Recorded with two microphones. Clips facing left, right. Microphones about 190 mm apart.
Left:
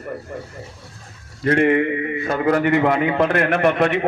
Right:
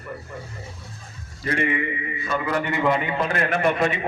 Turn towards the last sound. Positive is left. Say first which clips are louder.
# left 4 dB
turn(degrees=60)  # may be behind; listen again after turning